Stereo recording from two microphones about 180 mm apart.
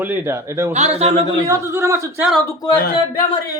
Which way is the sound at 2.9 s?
30° left (ahead or behind).